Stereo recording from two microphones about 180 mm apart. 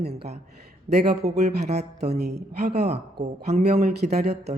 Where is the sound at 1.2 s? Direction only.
60° right (ahead or behind).